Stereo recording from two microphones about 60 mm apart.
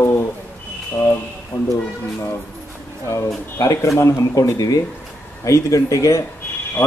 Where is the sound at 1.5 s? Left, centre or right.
Left.